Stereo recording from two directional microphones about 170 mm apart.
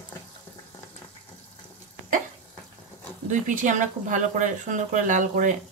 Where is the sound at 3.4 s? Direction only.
50° right (ahead or behind).